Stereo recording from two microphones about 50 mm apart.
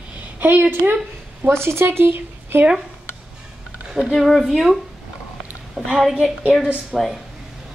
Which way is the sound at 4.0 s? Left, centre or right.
Centre.